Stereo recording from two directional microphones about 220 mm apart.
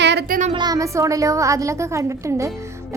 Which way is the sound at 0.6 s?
15° right (ahead or behind).